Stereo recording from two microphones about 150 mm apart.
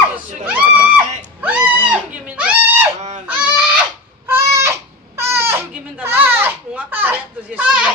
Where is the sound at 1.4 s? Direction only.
10° right (ahead or behind).